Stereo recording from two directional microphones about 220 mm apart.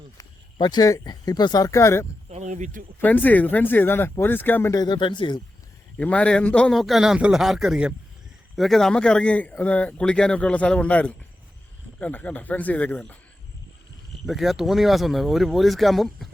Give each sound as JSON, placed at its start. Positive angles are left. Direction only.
{"t": 0.2, "sound": "speech", "side_deg": 15}
{"t": 2.3, "sound": "speech", "side_deg": -35}
{"t": 3.0, "sound": "speech", "side_deg": 10}
{"t": 6.0, "sound": "speech", "side_deg": 5}
{"t": 14.3, "sound": "speech", "side_deg": 0}